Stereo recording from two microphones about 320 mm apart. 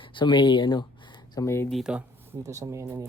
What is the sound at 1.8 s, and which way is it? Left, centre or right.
Speech, centre.